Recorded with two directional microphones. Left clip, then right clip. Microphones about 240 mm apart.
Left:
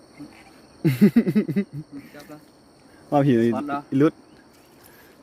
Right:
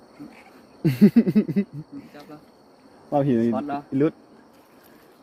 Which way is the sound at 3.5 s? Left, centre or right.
Centre.